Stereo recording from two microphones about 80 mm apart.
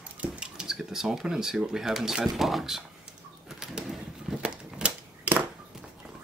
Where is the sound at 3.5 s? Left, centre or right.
Centre.